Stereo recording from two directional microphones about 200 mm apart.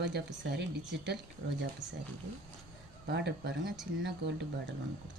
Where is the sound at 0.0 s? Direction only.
60° right (ahead or behind).